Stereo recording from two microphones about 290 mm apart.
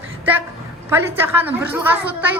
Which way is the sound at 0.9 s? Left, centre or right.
Centre.